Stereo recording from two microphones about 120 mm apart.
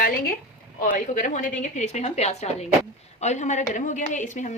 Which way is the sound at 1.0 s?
90° left.